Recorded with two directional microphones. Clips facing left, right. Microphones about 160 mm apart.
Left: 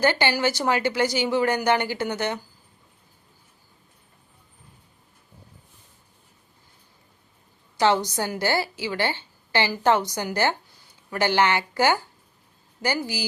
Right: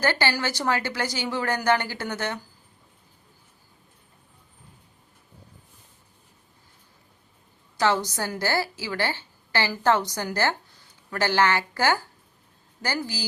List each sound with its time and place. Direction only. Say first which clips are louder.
0.0 s speech: left 3 dB; 20° left (ahead or behind)
7.8 s a woman's voice: left 2 dB; 20° left (ahead or behind)